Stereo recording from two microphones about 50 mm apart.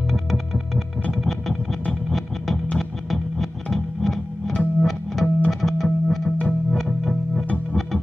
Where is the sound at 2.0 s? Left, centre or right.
Centre.